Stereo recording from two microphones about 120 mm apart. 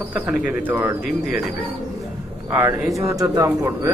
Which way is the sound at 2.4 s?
20° right (ahead or behind).